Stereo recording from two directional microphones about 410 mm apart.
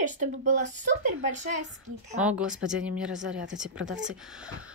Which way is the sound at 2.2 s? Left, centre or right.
Centre.